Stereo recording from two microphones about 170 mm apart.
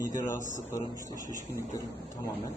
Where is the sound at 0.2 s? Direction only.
15° left (ahead or behind).